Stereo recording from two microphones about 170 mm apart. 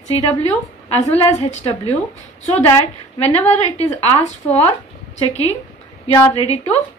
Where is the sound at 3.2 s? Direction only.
40° left (ahead or behind).